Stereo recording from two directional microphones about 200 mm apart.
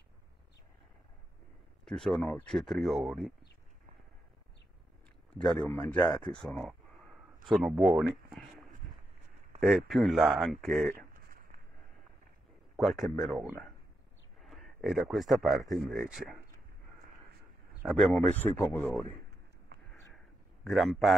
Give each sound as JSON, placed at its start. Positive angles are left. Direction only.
{"t": 1.9, "sound": "speech", "side_deg": 0}
{"t": 5.4, "sound": "speech", "side_deg": 5}
{"t": 8.3, "sound": "a sound", "side_deg": 0}
{"t": 9.6, "sound": "speech", "side_deg": 0}
{"t": 11.0, "sound": "a sound", "side_deg": -45}
{"t": 12.7, "sound": "speech", "side_deg": 0}
{"t": 14.4, "sound": "speech", "side_deg": 0}
{"t": 17.8, "sound": "speech", "side_deg": 10}
{"t": 20.6, "sound": "speech", "side_deg": 0}